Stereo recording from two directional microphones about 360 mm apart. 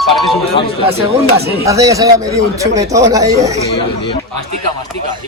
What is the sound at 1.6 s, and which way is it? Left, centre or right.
A man's voice, centre.